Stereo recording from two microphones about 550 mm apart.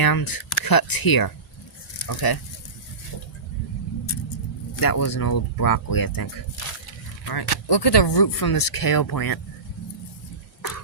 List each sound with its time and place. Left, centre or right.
0.0 s speech: left
4.8 s speech: left
7.3 s speech: left